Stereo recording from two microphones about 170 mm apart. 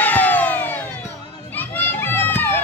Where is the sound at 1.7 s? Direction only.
10° left (ahead or behind).